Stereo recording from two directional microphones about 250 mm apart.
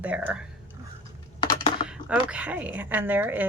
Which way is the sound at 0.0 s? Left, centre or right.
Centre.